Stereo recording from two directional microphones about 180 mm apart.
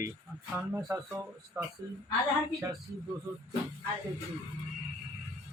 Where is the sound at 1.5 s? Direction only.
20° right (ahead or behind).